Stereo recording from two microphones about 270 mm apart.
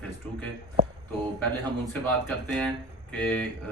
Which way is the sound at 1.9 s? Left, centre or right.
Centre.